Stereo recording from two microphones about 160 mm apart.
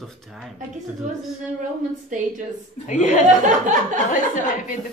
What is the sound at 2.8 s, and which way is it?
Speech, 50° left (ahead or behind).